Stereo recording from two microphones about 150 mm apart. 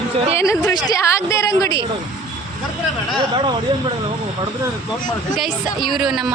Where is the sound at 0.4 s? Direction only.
20° left (ahead or behind).